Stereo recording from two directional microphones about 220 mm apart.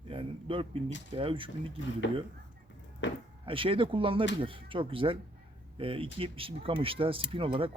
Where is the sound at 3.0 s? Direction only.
55° left (ahead or behind).